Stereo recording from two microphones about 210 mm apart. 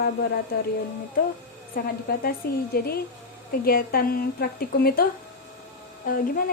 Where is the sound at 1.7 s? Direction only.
45° left (ahead or behind).